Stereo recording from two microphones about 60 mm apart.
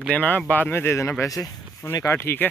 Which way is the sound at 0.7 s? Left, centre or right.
Left.